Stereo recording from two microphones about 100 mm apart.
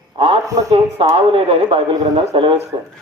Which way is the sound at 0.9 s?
70° right (ahead or behind).